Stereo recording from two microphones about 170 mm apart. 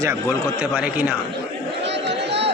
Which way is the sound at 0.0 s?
15° right (ahead or behind).